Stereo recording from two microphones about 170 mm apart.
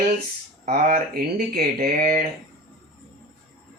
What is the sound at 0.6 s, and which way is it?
Speech, 50° right (ahead or behind).